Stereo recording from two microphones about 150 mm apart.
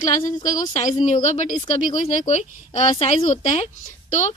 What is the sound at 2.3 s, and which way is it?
A woman's voice, 45° left (ahead or behind).